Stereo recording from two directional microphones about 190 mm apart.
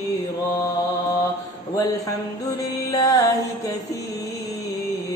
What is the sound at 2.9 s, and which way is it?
Music, 20° left (ahead or behind).